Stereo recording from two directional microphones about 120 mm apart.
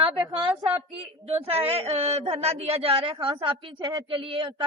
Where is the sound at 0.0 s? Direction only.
45° right (ahead or behind).